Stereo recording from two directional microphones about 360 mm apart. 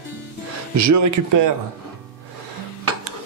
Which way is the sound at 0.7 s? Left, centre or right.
Right.